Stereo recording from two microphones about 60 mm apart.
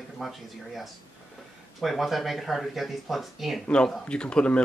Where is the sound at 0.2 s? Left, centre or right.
Centre.